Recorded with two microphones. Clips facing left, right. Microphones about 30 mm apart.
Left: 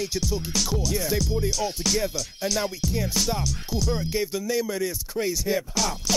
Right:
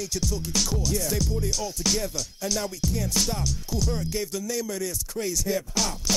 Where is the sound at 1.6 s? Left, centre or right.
Left.